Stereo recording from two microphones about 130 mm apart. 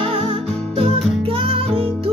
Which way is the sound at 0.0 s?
45° right (ahead or behind).